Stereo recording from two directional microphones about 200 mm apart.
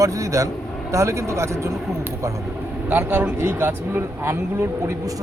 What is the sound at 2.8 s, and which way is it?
Speech, 10° right (ahead or behind).